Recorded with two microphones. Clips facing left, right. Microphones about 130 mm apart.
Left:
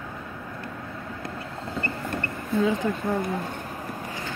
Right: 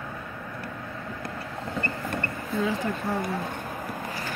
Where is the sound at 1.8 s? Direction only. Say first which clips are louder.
Left 1 dB; 20° left (ahead or behind).